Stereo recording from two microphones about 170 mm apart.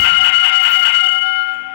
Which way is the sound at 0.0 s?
80° left.